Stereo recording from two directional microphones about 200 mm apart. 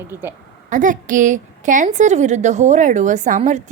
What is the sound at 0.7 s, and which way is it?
A woman's voice, 40° right (ahead or behind).